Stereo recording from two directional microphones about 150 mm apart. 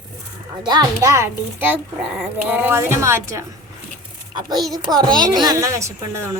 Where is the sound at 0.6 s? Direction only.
25° right (ahead or behind).